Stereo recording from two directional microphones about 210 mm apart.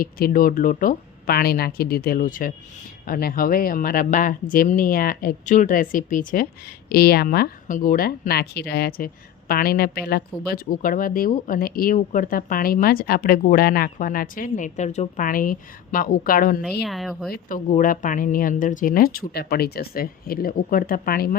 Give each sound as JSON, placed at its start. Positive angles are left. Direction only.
{"t": 0.0, "sound": "speech", "side_deg": 45}
{"t": 16.8, "sound": "speech", "side_deg": 0}
{"t": 17.3, "sound": "speech", "side_deg": 40}